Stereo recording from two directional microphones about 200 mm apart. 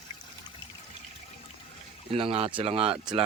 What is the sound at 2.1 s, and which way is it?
Speech, 30° right (ahead or behind).